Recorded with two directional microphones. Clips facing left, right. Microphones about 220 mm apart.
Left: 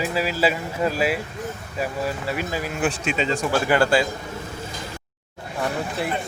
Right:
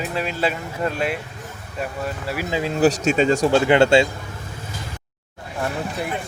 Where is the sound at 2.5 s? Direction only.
20° right (ahead or behind).